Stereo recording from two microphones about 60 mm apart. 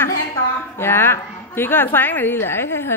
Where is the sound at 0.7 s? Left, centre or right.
Left.